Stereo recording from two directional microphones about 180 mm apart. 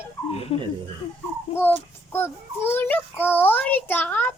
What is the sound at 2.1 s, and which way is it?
A child's voice, 10° left (ahead or behind).